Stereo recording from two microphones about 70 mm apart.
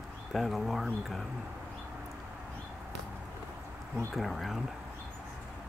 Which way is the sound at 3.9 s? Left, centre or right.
Centre.